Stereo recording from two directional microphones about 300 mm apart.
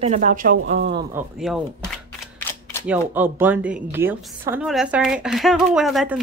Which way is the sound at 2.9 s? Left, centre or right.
Centre.